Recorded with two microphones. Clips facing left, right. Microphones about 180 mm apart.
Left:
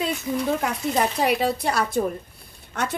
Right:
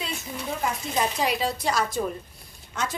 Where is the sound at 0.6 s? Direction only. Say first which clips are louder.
Left 3 dB; 60° left (ahead or behind).